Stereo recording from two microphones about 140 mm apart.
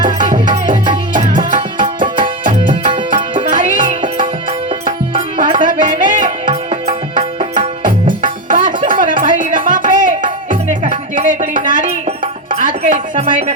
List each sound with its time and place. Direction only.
0.7 s music: 35° right (ahead or behind)
1.5 s music: 65° right (ahead or behind)
6.5 s music: 50° right (ahead or behind)
7.5 s music: 65° right (ahead or behind)